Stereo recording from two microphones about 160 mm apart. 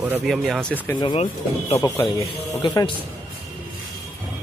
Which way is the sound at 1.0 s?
30° left (ahead or behind).